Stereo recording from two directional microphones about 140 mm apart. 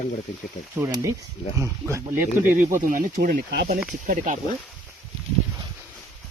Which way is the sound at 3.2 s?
90° right.